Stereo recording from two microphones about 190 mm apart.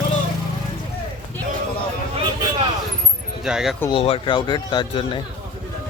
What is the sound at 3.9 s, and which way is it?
Speech, 30° left (ahead or behind).